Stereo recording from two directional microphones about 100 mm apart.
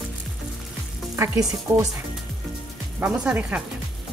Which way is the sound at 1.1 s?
30° right (ahead or behind).